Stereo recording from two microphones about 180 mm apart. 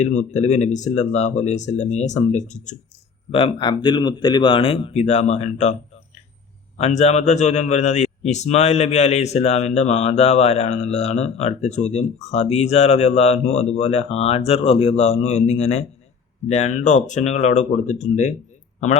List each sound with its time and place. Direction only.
0.0 s a man's voice: 40° left (ahead or behind)
3.3 s speech: 30° left (ahead or behind)
6.7 s a man's voice: 35° left (ahead or behind)